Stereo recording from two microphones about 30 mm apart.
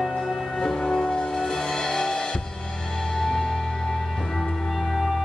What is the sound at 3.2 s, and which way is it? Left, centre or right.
Music, centre.